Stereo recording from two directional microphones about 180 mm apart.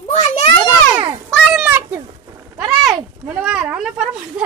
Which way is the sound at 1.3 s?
Centre (ahead or behind).